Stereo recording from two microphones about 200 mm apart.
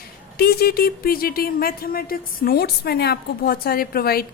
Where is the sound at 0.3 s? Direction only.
50° left (ahead or behind).